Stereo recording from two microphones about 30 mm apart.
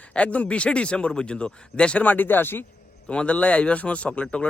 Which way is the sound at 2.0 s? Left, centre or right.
Left.